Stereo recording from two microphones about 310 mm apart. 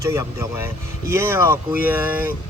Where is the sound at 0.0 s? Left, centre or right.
Centre.